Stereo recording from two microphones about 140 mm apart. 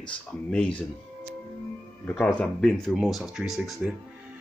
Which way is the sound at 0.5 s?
10° left (ahead or behind).